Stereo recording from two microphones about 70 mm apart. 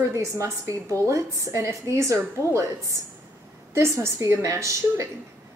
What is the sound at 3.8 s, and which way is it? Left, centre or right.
A woman's voice, right.